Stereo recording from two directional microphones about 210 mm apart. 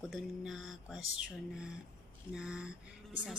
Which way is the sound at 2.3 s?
5° right (ahead or behind).